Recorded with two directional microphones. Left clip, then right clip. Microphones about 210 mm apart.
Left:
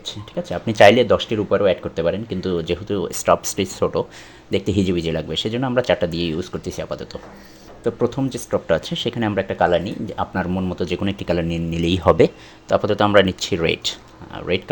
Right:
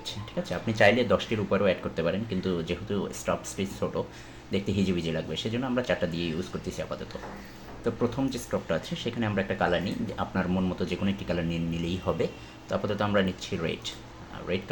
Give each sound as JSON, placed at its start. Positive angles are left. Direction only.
{"t": 0.0, "sound": "speech", "side_deg": 35}